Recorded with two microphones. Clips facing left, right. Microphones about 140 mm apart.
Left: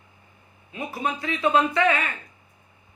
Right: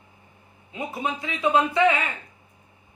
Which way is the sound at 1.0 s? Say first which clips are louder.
Left 1 dB; 15° right (ahead or behind).